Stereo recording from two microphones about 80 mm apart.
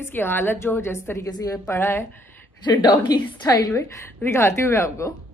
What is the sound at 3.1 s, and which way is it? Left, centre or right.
Speech, left.